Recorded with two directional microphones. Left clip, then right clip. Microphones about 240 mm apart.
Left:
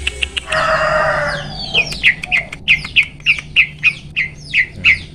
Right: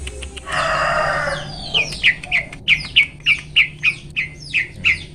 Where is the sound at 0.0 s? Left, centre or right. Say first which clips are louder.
Left 14 dB; centre.